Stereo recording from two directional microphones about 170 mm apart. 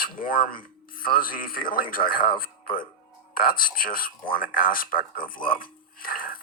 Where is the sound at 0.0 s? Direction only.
55° left (ahead or behind).